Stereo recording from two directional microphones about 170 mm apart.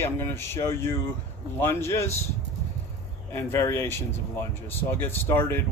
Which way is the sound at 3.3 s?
15° left (ahead or behind).